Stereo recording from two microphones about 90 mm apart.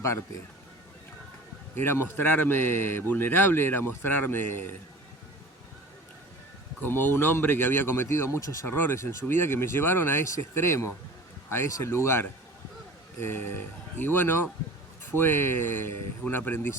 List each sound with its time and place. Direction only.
1.8 s speech: 25° left (ahead or behind)
6.8 s speech: 25° left (ahead or behind)